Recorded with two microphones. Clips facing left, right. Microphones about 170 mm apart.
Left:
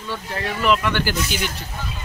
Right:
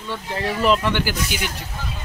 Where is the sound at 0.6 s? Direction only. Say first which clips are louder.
Right 1 dB; 35° right (ahead or behind).